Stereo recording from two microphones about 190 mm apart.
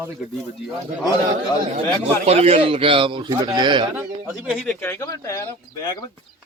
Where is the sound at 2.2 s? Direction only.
30° right (ahead or behind).